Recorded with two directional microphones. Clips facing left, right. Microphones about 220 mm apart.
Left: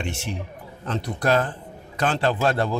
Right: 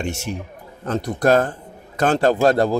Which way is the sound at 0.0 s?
45° right (ahead or behind).